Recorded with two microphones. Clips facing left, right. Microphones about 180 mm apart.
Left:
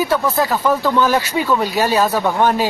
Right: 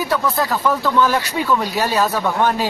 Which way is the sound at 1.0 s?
5° left (ahead or behind).